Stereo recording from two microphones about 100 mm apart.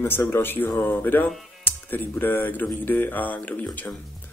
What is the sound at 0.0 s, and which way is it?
Speech, 25° left (ahead or behind).